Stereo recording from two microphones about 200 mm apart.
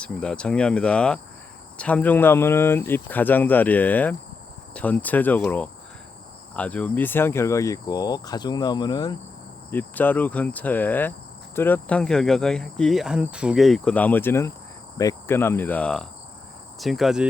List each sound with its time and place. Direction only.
0.0 s cricket: 5° left (ahead or behind)
1.8 s speech: 5° left (ahead or behind)
9.6 s speech: 10° left (ahead or behind)
11.5 s cricket: 10° left (ahead or behind)
14.9 s speech: 15° left (ahead or behind)
16.8 s cricket: centre (ahead or behind)